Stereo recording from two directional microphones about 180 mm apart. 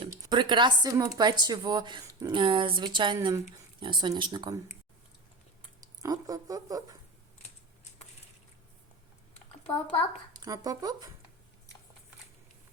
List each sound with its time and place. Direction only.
0.0 s speech: 25° right (ahead or behind)
6.0 s a sound: 20° right (ahead or behind)
9.9 s a child's voice: 30° left (ahead or behind)
10.4 s speech: 20° right (ahead or behind)